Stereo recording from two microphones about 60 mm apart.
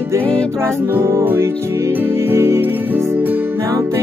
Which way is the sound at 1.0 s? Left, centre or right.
Right.